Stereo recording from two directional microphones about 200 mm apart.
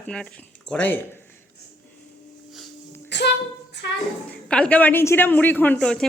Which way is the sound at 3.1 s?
60° left (ahead or behind).